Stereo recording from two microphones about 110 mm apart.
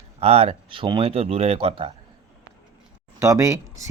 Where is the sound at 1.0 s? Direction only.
60° right (ahead or behind).